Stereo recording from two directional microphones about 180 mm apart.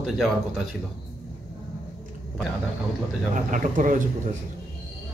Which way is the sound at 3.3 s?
45° right (ahead or behind).